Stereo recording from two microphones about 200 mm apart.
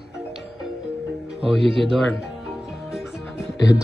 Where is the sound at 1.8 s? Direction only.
Centre (ahead or behind).